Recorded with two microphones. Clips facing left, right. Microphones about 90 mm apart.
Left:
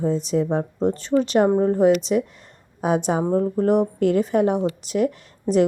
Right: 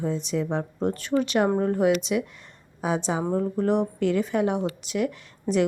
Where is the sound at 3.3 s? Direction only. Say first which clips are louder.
Left 5 dB; 35° left (ahead or behind).